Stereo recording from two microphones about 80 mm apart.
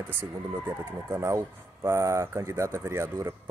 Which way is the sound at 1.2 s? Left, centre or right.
Right.